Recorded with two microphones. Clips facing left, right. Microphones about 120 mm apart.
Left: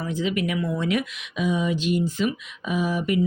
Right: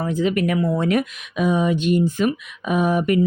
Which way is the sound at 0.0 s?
50° right (ahead or behind).